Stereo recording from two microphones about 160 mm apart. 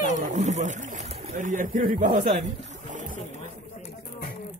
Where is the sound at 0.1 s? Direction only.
50° right (ahead or behind).